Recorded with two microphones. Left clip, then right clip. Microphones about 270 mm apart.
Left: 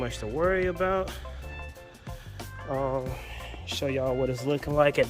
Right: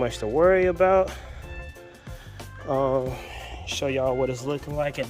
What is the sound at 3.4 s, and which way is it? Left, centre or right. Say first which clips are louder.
Speech: right 3 dB; centre.